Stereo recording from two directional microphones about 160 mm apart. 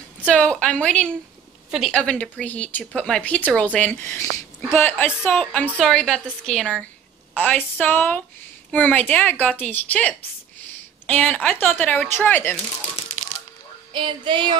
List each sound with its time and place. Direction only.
0.2 s a woman's voice: 5° left (ahead or behind)
13.9 s female singing: 30° right (ahead or behind)